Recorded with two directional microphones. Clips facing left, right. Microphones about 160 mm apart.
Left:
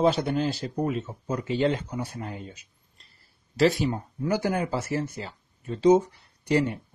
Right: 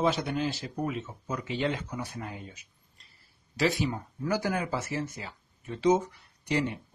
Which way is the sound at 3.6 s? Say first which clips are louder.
Left 3 dB; 35° left (ahead or behind).